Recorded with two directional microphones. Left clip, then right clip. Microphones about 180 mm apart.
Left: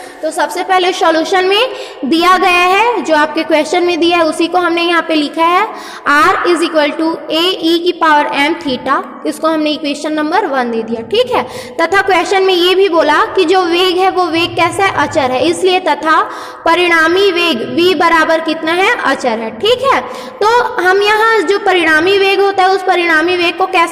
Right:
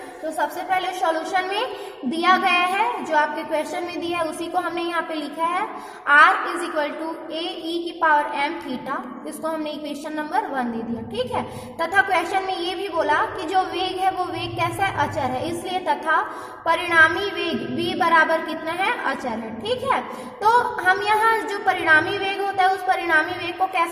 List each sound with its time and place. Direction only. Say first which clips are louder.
0.3 s a woman's voice: left 11 dB; 35° left (ahead or behind)